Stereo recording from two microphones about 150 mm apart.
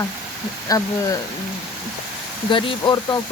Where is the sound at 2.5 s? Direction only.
35° left (ahead or behind).